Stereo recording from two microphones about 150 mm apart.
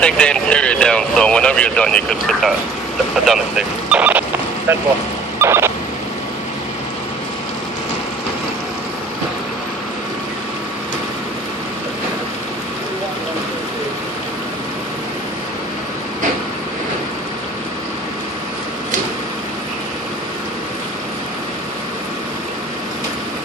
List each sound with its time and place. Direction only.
0.0 s speech: 5° left (ahead or behind); by 4.8 s 15° right (ahead or behind)
5.4 s vehicle: 15° right (ahead or behind)